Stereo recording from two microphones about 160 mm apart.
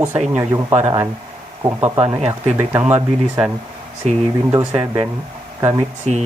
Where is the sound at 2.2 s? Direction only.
45° right (ahead or behind).